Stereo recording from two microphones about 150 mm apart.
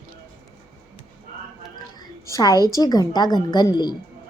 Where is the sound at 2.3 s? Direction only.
25° left (ahead or behind).